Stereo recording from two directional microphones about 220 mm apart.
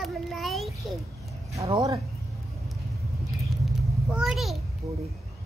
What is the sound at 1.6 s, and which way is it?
Speech, 15° right (ahead or behind).